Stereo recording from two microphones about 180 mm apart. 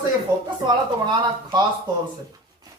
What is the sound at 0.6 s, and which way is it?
Speech, 25° right (ahead or behind).